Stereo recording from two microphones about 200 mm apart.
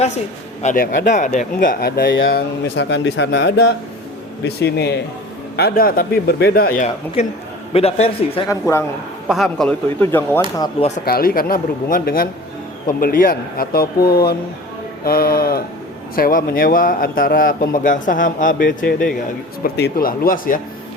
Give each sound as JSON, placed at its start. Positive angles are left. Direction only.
{"t": 0.6, "sound": "speech", "side_deg": 40}
{"t": 2.3, "sound": "a man's voice", "side_deg": 60}
{"t": 7.7, "sound": "speech", "side_deg": 30}
{"t": 8.4, "sound": "speech", "side_deg": 15}
{"t": 9.3, "sound": "speech", "side_deg": 0}
{"t": 10.6, "sound": "speech", "side_deg": 30}
{"t": 11.0, "sound": "a man's voice", "side_deg": 50}
{"t": 18.9, "sound": "speech", "side_deg": 5}
{"t": 19.6, "sound": "a man's voice", "side_deg": 50}